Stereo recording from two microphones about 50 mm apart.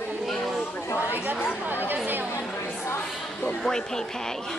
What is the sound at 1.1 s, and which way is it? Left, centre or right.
Speech, right.